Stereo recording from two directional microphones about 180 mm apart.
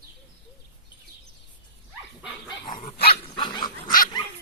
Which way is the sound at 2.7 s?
55° left (ahead or behind).